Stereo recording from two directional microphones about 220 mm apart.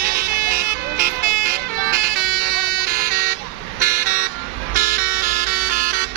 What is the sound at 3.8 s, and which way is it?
Vehicle, 35° right (ahead or behind).